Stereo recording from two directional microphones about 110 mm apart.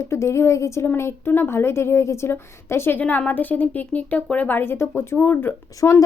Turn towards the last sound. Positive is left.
turn(degrees=25)  # may be behind; listen again after turning